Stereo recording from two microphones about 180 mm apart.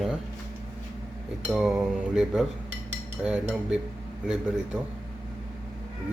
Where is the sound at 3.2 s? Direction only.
5° right (ahead or behind).